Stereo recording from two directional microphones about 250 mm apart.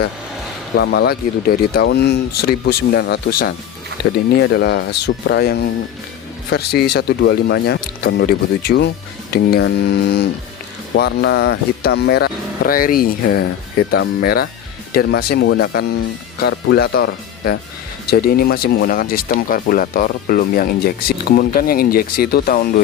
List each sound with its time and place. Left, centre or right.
0.8 s speech: left